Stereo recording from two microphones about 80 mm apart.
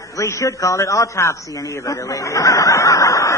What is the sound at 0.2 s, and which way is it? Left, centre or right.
A man's voice, left.